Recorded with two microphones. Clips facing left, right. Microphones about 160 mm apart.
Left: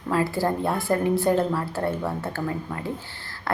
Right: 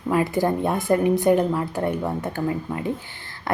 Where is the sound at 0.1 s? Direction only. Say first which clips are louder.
Right 3 dB; 20° right (ahead or behind).